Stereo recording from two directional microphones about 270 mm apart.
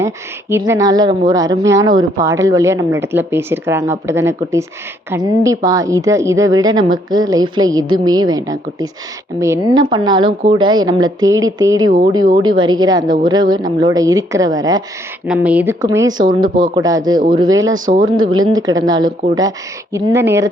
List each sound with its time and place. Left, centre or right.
0.5 s a woman's voice: centre